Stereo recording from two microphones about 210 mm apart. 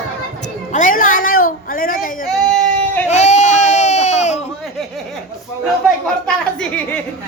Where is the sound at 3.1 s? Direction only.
35° left (ahead or behind).